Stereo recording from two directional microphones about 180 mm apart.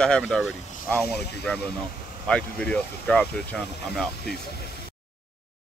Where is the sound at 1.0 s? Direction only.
65° left (ahead or behind).